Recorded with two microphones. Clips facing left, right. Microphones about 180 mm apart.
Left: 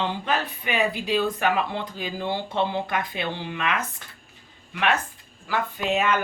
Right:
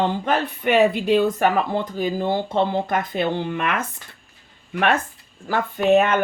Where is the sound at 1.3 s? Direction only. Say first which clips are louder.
Right 5 dB; 45° right (ahead or behind).